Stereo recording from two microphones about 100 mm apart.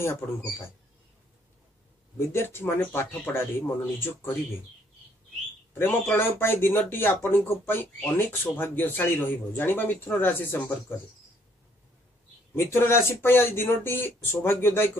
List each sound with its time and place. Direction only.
0.0 s speech: 25° left (ahead or behind)
2.1 s speech: 25° left (ahead or behind)
5.8 s speech: 20° left (ahead or behind)
12.5 s speech: 25° left (ahead or behind)